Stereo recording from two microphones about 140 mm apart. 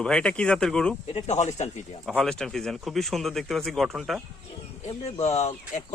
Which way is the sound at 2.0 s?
Centre (ahead or behind).